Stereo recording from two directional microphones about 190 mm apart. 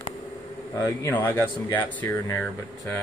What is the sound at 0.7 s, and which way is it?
Speech, 20° left (ahead or behind).